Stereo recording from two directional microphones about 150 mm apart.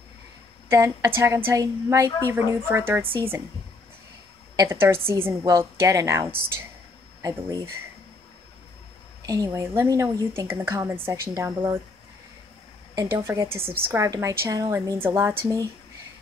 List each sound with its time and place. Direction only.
0.7 s speech: 20° right (ahead or behind)
4.6 s speech: 15° right (ahead or behind)
9.2 s speech: 25° right (ahead or behind)
12.9 s speech: 20° right (ahead or behind)
13.6 s a woman's voice: 40° right (ahead or behind)
13.9 s speech: 20° right (ahead or behind)